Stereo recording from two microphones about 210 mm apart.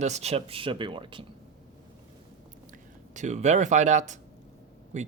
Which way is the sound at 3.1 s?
35° right (ahead or behind).